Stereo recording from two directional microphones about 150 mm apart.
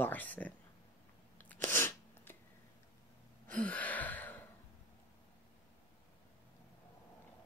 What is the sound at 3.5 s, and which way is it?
Gasp, 10° left (ahead or behind).